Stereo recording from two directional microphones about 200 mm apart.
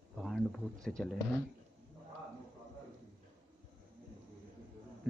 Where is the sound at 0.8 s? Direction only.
5° left (ahead or behind).